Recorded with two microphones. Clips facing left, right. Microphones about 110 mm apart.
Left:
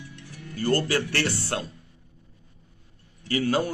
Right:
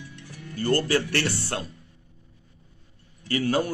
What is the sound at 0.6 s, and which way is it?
Speech, 15° left (ahead or behind).